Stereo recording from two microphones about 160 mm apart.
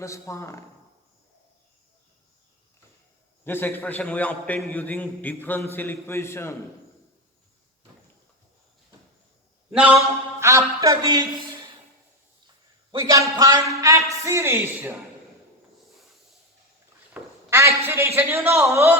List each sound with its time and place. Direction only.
0.0 s a man's voice: 20° left (ahead or behind)
3.4 s a man's voice: 15° left (ahead or behind)
9.7 s a man's voice: 10° right (ahead or behind)
10.4 s a man's voice: 20° right (ahead or behind)
12.9 s a man's voice: 20° right (ahead or behind)
17.2 s a sound: 10° right (ahead or behind)
17.5 s a man's voice: 15° right (ahead or behind)